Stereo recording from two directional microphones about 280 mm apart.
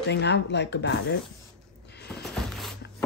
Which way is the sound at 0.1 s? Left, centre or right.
Left.